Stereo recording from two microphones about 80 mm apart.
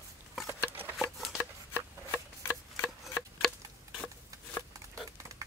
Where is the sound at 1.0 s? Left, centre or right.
Centre.